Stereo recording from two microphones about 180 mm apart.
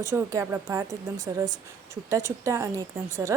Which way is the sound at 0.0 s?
15° right (ahead or behind).